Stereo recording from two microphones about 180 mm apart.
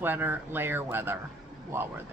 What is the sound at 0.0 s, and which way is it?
A woman's voice, 10° right (ahead or behind).